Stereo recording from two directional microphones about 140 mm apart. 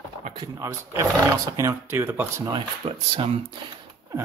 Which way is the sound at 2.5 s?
40° right (ahead or behind).